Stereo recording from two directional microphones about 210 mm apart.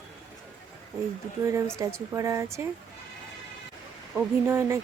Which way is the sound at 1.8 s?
15° right (ahead or behind).